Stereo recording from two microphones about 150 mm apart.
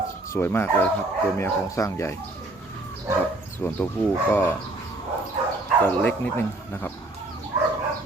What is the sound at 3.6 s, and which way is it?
Speech, 15° left (ahead or behind).